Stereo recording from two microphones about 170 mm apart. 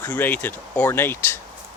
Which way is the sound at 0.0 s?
10° left (ahead or behind).